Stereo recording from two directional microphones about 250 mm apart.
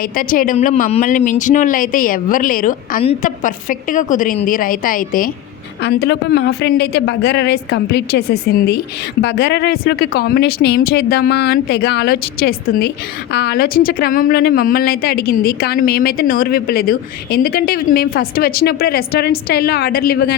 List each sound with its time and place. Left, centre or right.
0.0 s a woman's voice: left